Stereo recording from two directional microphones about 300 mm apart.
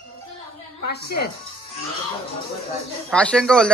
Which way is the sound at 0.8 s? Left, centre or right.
Left.